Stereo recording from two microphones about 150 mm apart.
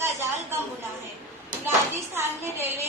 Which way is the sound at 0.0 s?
15° right (ahead or behind).